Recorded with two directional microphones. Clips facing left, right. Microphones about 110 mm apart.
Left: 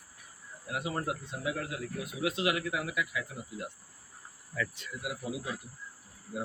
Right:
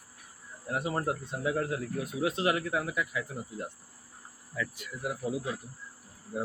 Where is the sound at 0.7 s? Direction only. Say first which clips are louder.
Right 3 dB; 35° right (ahead or behind).